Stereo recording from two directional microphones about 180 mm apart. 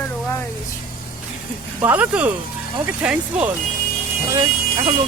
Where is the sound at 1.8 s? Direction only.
10° right (ahead or behind).